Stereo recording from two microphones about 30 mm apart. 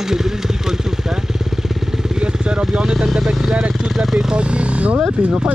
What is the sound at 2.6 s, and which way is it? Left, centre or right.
Speech, centre.